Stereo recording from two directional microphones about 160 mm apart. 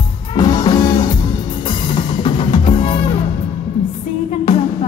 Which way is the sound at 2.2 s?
35° left (ahead or behind).